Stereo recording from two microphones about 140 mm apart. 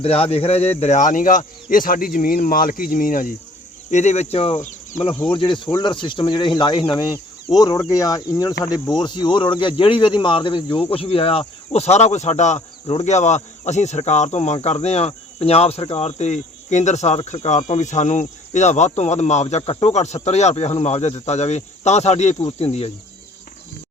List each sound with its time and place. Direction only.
0.0 s speech: 45° left (ahead or behind); by 3.3 s 75° left (ahead or behind)
3.9 s speech: 55° left (ahead or behind)